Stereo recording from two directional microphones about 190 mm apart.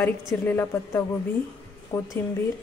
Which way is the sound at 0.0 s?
10° left (ahead or behind).